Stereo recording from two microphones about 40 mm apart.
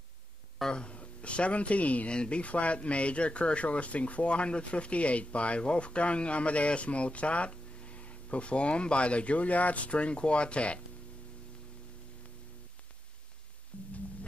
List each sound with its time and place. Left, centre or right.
0.7 s speech: left